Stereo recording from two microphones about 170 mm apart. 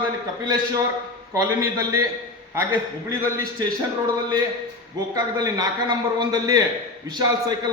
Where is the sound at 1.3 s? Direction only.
20° right (ahead or behind).